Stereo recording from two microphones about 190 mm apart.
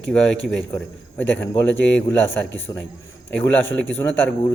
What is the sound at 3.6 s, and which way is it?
Speech, 90° left.